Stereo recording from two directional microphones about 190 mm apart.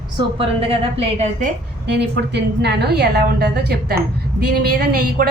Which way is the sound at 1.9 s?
60° right (ahead or behind).